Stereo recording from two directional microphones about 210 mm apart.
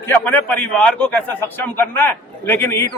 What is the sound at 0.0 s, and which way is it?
A man's voice, 10° left (ahead or behind).